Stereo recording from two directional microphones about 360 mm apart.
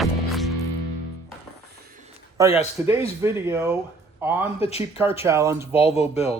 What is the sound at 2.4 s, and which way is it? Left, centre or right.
Speech, centre.